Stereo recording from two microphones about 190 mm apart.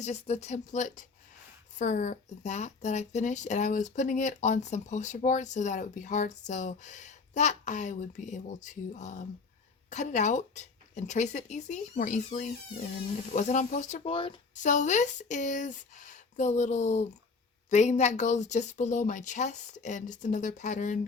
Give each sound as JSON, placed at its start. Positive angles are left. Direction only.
{"t": 0.0, "sound": "speech", "side_deg": 35}
{"t": 14.5, "sound": "speech", "side_deg": 40}